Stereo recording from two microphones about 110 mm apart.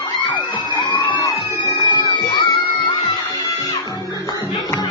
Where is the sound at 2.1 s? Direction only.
40° left (ahead or behind).